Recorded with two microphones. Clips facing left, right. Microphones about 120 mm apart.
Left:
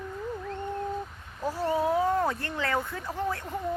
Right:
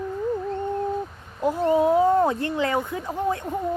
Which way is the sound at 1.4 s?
20° right (ahead or behind).